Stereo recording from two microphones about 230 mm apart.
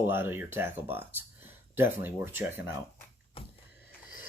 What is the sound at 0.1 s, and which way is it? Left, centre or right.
Speech, centre.